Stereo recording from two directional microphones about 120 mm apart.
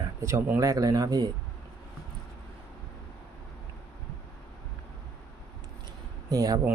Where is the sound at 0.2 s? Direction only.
20° right (ahead or behind).